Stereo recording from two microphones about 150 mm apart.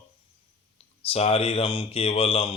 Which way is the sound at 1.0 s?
40° left (ahead or behind).